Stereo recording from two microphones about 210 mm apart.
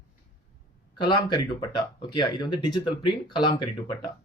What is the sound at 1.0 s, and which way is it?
Speech, 20° left (ahead or behind).